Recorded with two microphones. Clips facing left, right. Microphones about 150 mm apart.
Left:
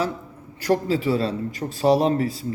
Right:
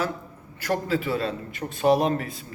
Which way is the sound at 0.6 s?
30° left (ahead or behind).